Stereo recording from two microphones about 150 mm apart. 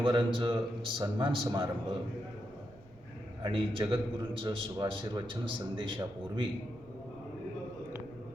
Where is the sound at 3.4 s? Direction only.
30° right (ahead or behind).